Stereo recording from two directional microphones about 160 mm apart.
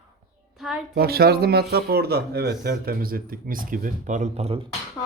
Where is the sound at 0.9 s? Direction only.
75° right (ahead or behind); by 4.7 s 40° right (ahead or behind).